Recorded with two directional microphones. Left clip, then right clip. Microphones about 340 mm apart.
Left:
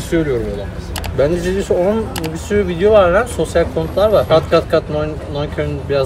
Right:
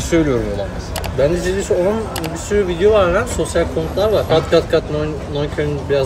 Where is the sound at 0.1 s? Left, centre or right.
Centre.